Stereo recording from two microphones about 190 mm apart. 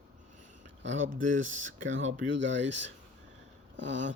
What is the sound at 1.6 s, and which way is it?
Speech, 90° right.